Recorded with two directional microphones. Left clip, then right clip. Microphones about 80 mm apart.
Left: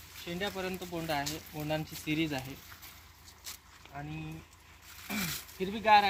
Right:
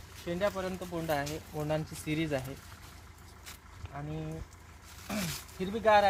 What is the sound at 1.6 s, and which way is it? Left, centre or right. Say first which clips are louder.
Speech: even; right.